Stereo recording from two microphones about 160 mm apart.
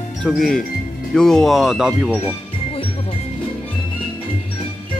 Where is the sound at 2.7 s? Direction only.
35° left (ahead or behind).